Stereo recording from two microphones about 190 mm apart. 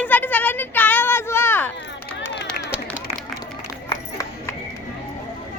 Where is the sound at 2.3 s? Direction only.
60° left (ahead or behind).